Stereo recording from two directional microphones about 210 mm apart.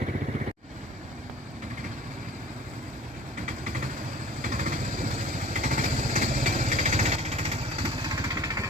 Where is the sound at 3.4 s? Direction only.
40° right (ahead or behind).